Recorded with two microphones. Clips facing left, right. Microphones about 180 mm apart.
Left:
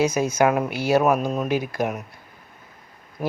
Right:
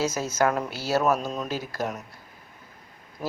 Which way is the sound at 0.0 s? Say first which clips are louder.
Left 5 dB; 15° left (ahead or behind).